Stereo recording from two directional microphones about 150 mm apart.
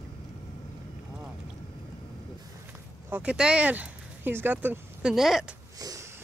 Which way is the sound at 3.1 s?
10° right (ahead or behind).